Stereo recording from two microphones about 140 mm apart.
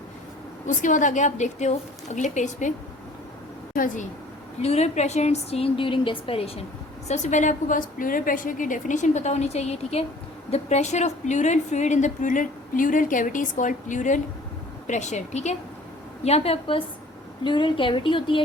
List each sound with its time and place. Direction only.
0.7 s a woman's voice: 65° left (ahead or behind)
3.8 s a woman's voice: 70° left (ahead or behind)
4.6 s a woman's voice: 50° left (ahead or behind)
7.1 s a woman's voice: 60° left (ahead or behind); by 18.4 s 35° left (ahead or behind)